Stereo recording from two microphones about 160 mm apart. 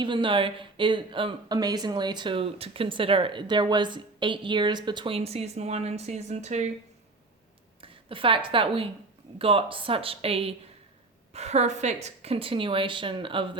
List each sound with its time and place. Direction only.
0.0 s speech: 30° right (ahead or behind); by 6.7 s 45° right (ahead or behind)
7.8 s a woman's voice: 35° right (ahead or behind)